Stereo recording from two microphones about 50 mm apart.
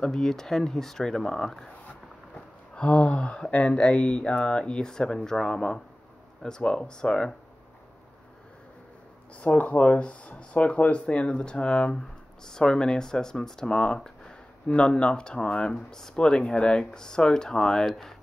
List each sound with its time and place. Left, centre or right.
0.0 s speech: centre
2.7 s speech: left
9.4 s speech: left; by 18.1 s centre